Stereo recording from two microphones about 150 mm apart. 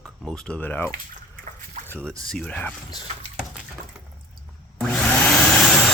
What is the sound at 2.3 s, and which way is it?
Speech, 5° left (ahead or behind).